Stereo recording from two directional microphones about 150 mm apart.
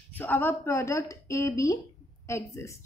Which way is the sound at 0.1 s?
10° left (ahead or behind).